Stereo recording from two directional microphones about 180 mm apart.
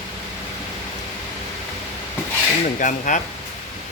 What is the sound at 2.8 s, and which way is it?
Speech, 45° left (ahead or behind).